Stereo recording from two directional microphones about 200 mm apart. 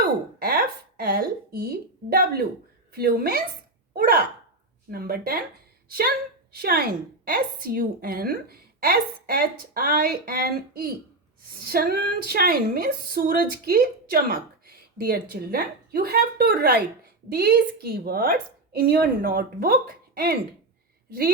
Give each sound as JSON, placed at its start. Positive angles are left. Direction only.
{"t": 0.0, "sound": "a woman's voice", "side_deg": -50}